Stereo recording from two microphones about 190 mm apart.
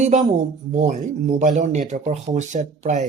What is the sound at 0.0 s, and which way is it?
Speech, 35° right (ahead or behind).